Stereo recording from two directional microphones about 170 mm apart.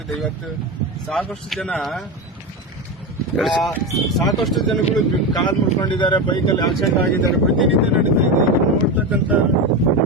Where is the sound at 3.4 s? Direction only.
Centre (ahead or behind).